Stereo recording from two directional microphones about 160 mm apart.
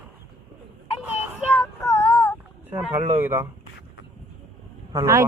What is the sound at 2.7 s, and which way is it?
Speech, 15° right (ahead or behind).